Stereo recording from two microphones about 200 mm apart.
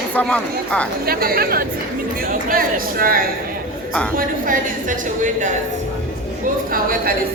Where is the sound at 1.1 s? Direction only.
50° right (ahead or behind).